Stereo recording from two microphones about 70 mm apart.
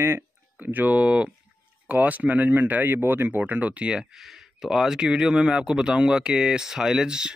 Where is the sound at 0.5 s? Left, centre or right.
Right.